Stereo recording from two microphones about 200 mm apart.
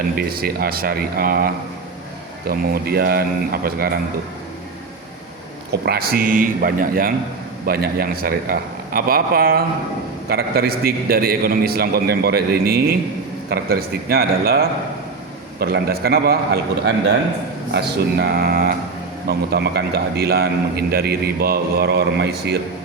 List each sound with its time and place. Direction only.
0.2 s a man's voice: 50° right (ahead or behind)
2.5 s a man's voice: 50° right (ahead or behind)
5.8 s a man's voice: 50° right (ahead or behind)